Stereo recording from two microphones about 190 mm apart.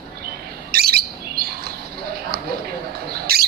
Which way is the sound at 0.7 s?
55° right (ahead or behind).